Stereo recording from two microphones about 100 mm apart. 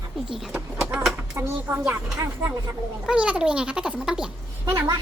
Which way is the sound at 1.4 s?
25° right (ahead or behind).